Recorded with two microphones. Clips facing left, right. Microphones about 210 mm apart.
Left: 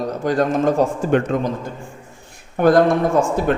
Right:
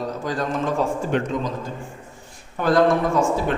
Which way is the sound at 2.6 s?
55° left (ahead or behind).